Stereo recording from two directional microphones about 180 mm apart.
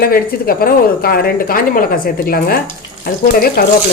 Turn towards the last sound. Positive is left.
turn(degrees=55)  # may be behind; listen again after turning